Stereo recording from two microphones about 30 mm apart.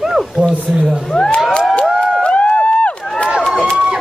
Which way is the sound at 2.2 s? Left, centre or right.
Left.